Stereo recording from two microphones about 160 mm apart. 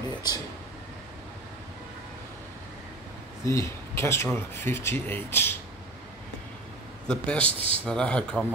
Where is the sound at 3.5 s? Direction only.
15° left (ahead or behind).